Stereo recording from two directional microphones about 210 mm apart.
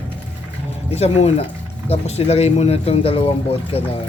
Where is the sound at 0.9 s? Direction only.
30° left (ahead or behind).